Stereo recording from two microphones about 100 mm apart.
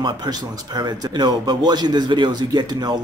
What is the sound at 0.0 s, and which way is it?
Speech, 45° right (ahead or behind).